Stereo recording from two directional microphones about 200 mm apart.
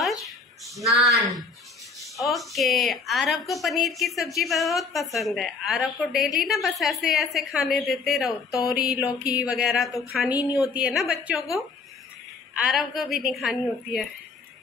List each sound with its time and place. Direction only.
0.0 s a sound: centre (ahead or behind)
1.0 s a woman's voice: centre (ahead or behind)
8.8 s a sound: 5° right (ahead or behind)
9.3 s a woman's voice: 5° right (ahead or behind)
10.3 s speech: 15° left (ahead or behind)
10.7 s a woman's voice: 5° right (ahead or behind)
12.5 s a woman's voice: centre (ahead or behind)